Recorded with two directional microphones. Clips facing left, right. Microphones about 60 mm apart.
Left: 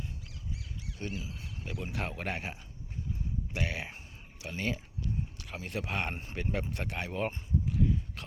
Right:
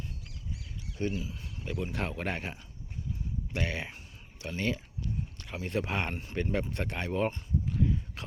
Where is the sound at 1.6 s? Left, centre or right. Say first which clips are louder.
Right 3 dB; centre.